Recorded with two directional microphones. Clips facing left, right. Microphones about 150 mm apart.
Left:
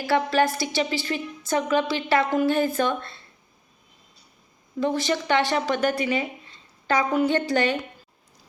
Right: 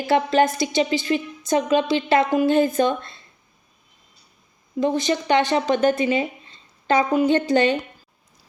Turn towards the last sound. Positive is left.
turn(degrees=-20)  # may be behind; listen again after turning